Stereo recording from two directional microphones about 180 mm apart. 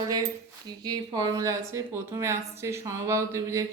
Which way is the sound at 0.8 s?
20° right (ahead or behind).